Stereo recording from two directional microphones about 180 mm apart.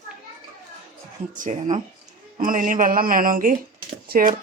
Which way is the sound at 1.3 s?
45° right (ahead or behind).